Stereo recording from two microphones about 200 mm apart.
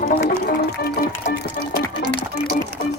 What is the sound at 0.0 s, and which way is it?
Music, 50° left (ahead or behind).